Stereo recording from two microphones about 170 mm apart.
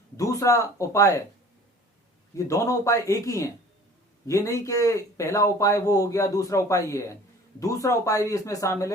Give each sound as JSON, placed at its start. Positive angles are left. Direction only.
{"t": 0.2, "sound": "speech", "side_deg": 20}
{"t": 2.3, "sound": "speech", "side_deg": 20}